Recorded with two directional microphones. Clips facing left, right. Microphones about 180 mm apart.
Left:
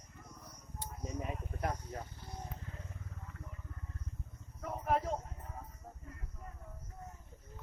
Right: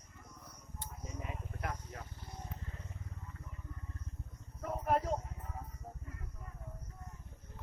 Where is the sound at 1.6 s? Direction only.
35° left (ahead or behind).